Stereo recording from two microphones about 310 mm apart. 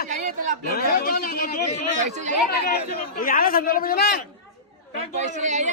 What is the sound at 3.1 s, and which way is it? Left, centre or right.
Speech, left.